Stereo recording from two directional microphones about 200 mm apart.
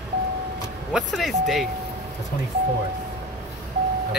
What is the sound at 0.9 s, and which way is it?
Speech, centre (ahead or behind).